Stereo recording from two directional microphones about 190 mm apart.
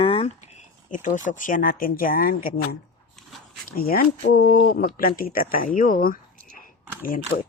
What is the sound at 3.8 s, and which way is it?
Speech, 50° left (ahead or behind).